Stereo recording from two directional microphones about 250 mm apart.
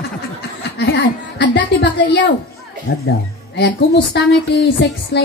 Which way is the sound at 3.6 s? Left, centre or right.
Left.